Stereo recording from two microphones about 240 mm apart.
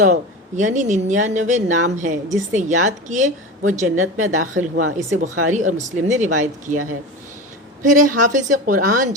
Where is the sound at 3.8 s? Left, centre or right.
Right.